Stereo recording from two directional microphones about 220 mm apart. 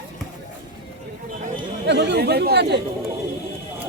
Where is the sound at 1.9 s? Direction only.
50° right (ahead or behind).